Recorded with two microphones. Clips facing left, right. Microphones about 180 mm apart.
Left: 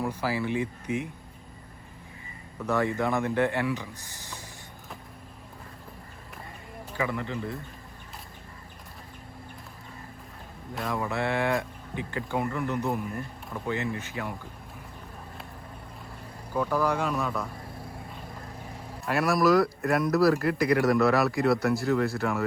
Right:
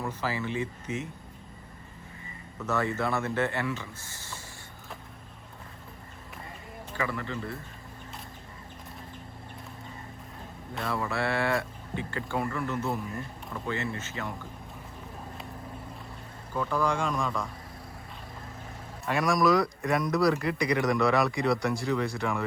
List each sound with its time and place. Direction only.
0.0 s speech: 10° left (ahead or behind)
2.6 s speech: 15° left (ahead or behind)
7.1 s speech: 20° left (ahead or behind)
10.8 s speech: 15° left (ahead or behind)
16.6 s speech: 5° left (ahead or behind)
19.0 s speech: 5° left (ahead or behind)